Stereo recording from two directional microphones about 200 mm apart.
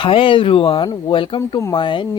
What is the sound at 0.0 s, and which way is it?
Speech, 25° left (ahead or behind).